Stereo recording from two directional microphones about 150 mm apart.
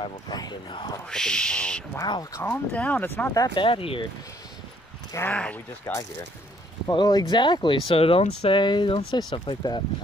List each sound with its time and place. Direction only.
0.0 s speech: 30° left (ahead or behind)
1.0 s speech: 5° left (ahead or behind)
2.0 s speech: 25° left (ahead or behind)
2.4 s speech: 10° left (ahead or behind)
3.3 s speech: 25° left (ahead or behind)
3.6 s speech: 35° left (ahead or behind)
5.1 s speech: 10° left (ahead or behind)
5.9 s speech: 20° left (ahead or behind)